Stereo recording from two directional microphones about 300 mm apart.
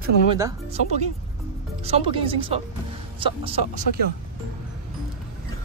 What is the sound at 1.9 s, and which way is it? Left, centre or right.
Speech, centre.